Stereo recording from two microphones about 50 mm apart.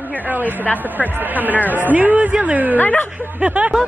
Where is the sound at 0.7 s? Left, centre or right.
Left.